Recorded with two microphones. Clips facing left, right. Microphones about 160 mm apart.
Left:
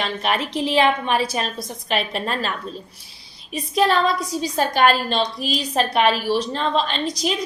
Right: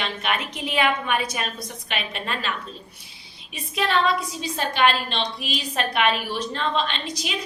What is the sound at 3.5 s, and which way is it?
A woman's voice, 40° left (ahead or behind).